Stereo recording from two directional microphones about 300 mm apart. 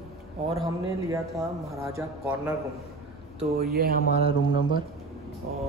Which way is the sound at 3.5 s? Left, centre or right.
Right.